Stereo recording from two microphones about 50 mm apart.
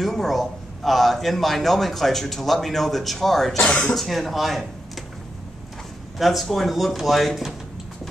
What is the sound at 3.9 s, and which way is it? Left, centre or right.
Speech, centre.